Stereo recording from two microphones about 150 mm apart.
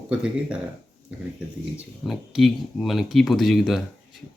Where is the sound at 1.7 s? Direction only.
Centre (ahead or behind).